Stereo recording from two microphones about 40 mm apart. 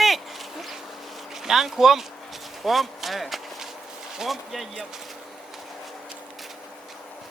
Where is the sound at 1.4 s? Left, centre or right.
Centre.